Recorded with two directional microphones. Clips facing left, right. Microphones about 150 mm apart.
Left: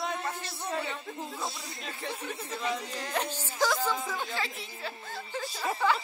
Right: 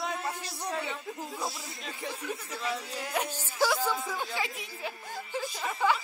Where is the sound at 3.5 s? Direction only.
10° right (ahead or behind).